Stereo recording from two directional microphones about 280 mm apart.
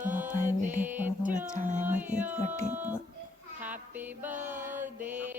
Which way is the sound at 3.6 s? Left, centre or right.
Centre.